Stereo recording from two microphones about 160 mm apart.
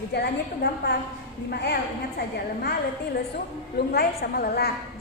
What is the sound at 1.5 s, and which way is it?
Speech, 90° left.